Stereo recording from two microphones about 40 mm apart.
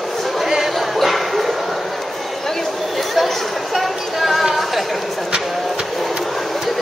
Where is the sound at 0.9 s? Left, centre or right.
Centre.